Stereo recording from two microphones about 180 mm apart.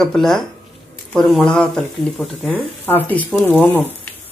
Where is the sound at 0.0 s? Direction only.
Centre (ahead or behind).